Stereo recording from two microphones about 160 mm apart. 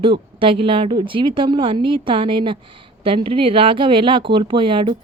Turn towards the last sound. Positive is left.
turn(degrees=-30)  # may be behind; listen again after turning